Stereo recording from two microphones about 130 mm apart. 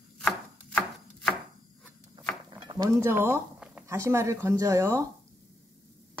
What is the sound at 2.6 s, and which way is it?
Cutlery, 35° right (ahead or behind).